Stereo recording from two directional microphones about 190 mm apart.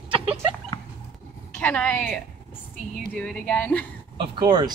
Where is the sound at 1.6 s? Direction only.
5° left (ahead or behind).